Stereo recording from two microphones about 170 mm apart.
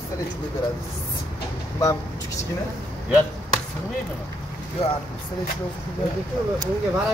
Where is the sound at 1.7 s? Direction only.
20° left (ahead or behind).